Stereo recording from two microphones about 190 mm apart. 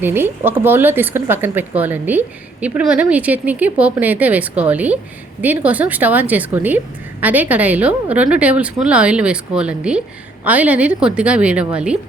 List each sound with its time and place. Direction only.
0.0 s a woman's voice: 10° right (ahead or behind)